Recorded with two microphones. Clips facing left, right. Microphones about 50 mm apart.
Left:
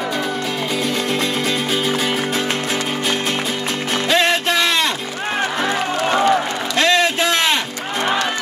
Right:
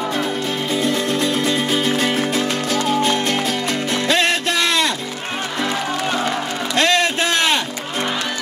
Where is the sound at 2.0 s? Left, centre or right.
Centre.